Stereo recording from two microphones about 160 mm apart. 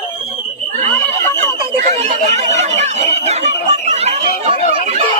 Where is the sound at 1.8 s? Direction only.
45° right (ahead or behind).